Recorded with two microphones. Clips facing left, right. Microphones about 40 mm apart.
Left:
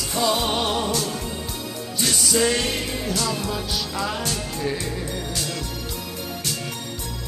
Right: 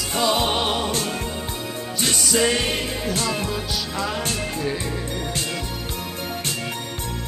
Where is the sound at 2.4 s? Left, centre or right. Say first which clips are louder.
Right 1 dB; centre.